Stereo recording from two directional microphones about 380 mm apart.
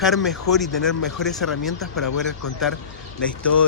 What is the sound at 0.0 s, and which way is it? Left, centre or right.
Speech, centre.